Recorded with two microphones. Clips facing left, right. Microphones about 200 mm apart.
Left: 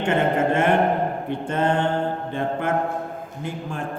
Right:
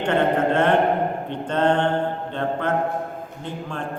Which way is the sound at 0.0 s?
10° left (ahead or behind).